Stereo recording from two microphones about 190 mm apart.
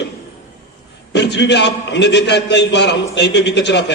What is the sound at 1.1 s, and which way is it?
A man's voice, 65° left (ahead or behind).